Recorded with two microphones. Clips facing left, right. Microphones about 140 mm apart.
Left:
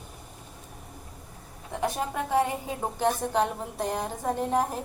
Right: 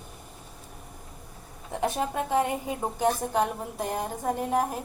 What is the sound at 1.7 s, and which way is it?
A woman's voice, 25° right (ahead or behind).